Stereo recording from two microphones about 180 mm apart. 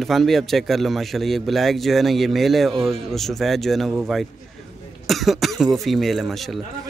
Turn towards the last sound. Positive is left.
turn(degrees=0)  # may be behind; listen again after turning